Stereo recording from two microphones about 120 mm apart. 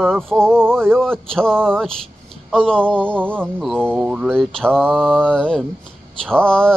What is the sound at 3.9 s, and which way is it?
Speech, 10° right (ahead or behind).